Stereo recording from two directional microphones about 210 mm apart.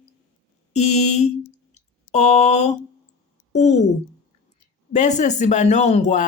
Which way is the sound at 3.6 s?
35° left (ahead or behind).